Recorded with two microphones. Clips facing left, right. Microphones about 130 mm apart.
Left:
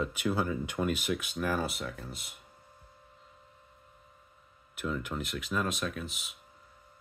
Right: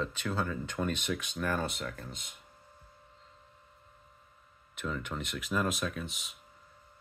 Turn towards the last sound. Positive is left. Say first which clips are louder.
# left 1 dB
turn(degrees=0)  # may be behind; listen again after turning